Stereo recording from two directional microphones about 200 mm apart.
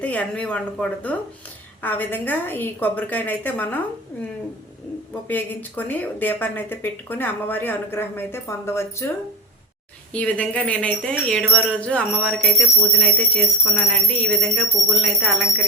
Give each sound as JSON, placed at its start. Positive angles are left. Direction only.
{"t": 0.0, "sound": "speech", "side_deg": 5}
{"t": 5.3, "sound": "speech", "side_deg": 10}
{"t": 10.1, "sound": "wind chime", "side_deg": 5}